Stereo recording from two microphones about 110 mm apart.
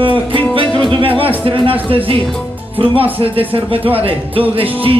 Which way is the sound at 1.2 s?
55° right (ahead or behind).